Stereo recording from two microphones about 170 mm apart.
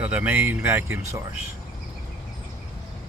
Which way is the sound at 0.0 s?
10° right (ahead or behind).